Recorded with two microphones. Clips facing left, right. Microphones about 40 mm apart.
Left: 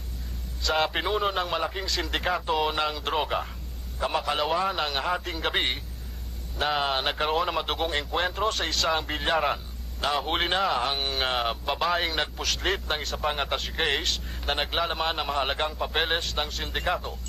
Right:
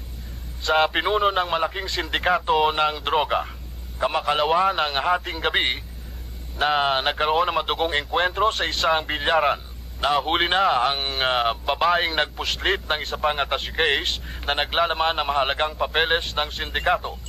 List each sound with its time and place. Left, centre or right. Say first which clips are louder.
0.6 s a man's voice: right 5 dB; right
9.9 s a man's voice: right 5 dB; right